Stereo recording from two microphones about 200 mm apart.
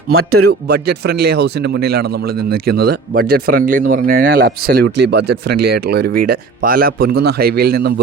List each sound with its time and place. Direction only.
0.1 s a man's voice: 90° right
0.7 s a man's voice: 50° right (ahead or behind)